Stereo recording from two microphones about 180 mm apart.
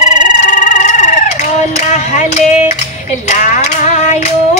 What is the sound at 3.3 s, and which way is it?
Female singing, 40° left (ahead or behind).